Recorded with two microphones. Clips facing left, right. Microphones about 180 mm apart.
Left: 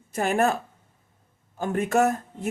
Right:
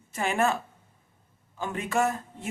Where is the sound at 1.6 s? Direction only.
50° left (ahead or behind).